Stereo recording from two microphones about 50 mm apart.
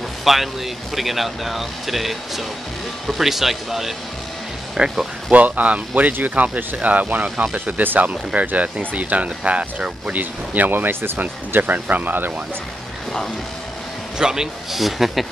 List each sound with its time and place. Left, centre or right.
0.2 s speech: centre
4.8 s speech: centre
5.3 s speech: right
10.1 s speech: right
11.1 s speech: right
14.1 s speech: centre
14.8 s speech: centre